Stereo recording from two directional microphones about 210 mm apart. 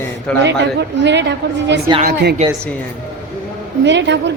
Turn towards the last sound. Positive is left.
turn(degrees=-55)  # may be behind; listen again after turning